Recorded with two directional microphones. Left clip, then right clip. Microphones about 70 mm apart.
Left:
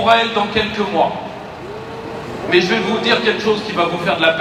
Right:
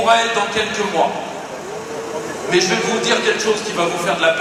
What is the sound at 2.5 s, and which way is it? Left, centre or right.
A man's voice, right.